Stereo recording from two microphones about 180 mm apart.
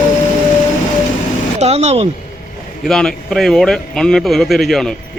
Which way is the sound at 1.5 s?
35° right (ahead or behind).